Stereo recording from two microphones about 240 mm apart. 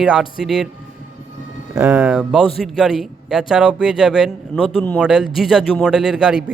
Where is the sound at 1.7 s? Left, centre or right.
Centre.